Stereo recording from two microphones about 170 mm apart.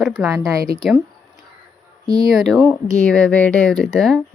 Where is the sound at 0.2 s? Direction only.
5° right (ahead or behind).